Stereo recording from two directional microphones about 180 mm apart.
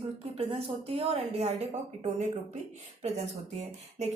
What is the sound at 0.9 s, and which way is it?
A woman's voice, 35° right (ahead or behind).